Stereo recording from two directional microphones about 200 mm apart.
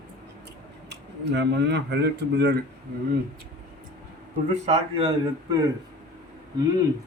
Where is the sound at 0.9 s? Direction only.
60° right (ahead or behind).